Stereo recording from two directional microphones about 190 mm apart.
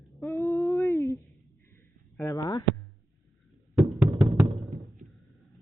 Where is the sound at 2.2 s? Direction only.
15° left (ahead or behind).